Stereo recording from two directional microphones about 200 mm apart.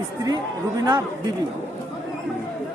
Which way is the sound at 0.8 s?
20° right (ahead or behind).